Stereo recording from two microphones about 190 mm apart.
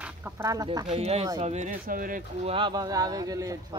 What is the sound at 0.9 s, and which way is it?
Speech, 35° right (ahead or behind).